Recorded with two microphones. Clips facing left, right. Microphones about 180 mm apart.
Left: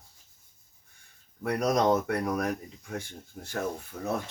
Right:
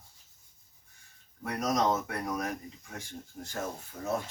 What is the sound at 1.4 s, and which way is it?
Speech, 60° left (ahead or behind).